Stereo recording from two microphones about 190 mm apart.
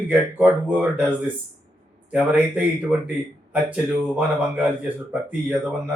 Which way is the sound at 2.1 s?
5° right (ahead or behind).